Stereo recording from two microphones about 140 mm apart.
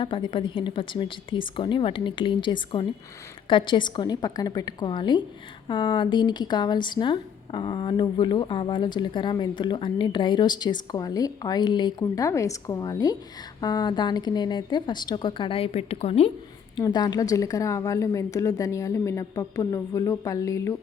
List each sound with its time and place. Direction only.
0.0 s speech: 35° left (ahead or behind)
16.8 s a woman's voice: 30° left (ahead or behind)